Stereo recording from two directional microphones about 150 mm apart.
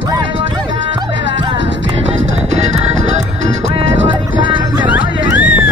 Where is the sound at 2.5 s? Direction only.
50° right (ahead or behind).